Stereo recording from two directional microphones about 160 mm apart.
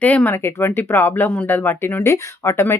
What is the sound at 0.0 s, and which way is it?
Speech, 10° left (ahead or behind).